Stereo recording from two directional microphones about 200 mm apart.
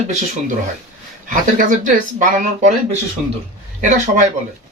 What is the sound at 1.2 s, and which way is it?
Speech, 40° right (ahead or behind).